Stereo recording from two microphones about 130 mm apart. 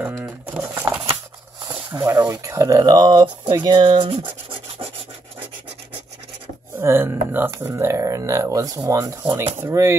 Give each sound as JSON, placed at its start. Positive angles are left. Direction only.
{"t": 0.0, "sound": "pigeon", "side_deg": -15}
{"t": 1.9, "sound": "speech", "side_deg": -25}
{"t": 4.5, "sound": "rub", "side_deg": -45}
{"t": 6.8, "sound": "speech", "side_deg": -20}